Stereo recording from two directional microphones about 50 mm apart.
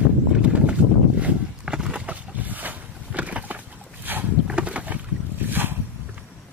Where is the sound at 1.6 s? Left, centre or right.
Centre.